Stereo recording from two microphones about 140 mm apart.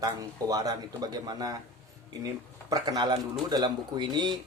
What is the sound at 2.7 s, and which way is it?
Speech, 30° right (ahead or behind).